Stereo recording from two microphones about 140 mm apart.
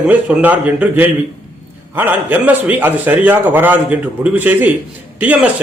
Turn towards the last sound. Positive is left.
turn(degrees=-10)  # may be behind; listen again after turning